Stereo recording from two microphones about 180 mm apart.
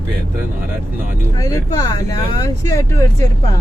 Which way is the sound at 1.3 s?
20° left (ahead or behind).